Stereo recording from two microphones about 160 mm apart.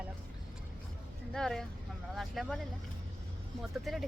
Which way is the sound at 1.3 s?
5° left (ahead or behind).